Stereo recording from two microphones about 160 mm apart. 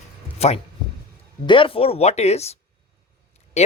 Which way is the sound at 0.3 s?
40° left (ahead or behind).